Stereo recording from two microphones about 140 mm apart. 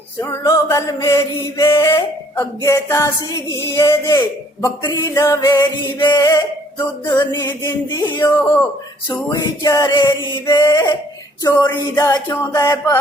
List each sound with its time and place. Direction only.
0.2 s mantra: 20° left (ahead or behind)
8.3 s speech: 15° left (ahead or behind)
9.3 s mantra: 25° left (ahead or behind)